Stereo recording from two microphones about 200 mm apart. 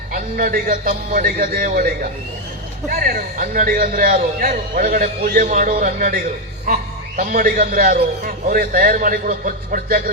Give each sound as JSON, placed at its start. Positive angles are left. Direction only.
{"t": 0.1, "sound": "a man's voice", "side_deg": -45}